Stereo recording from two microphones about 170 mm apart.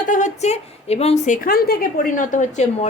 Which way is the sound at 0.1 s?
45° left (ahead or behind).